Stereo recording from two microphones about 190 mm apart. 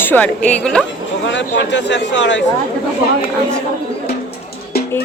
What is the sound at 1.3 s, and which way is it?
A man's voice, 70° left (ahead or behind).